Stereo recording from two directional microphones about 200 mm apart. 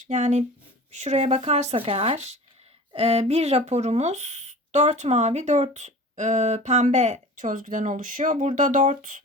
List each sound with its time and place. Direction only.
0.1 s speech: 35° right (ahead or behind)